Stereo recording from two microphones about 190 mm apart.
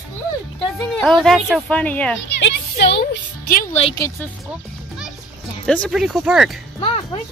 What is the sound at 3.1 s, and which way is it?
Music, 50° left (ahead or behind).